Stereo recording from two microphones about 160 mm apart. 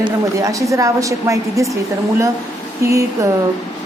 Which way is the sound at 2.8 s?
20° right (ahead or behind).